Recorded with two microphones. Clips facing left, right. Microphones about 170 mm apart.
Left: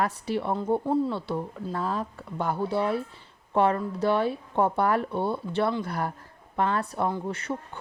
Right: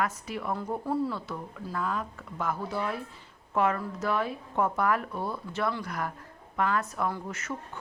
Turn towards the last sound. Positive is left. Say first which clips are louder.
# left 4 dB
turn(degrees=30)  # may be behind; listen again after turning